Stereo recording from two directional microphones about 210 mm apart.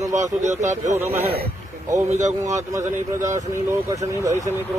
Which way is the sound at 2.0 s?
35° right (ahead or behind).